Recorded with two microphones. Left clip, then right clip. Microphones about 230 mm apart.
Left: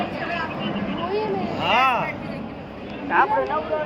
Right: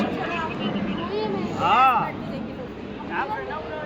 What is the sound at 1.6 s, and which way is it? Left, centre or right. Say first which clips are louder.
Vehicle: right 1 dB; centre.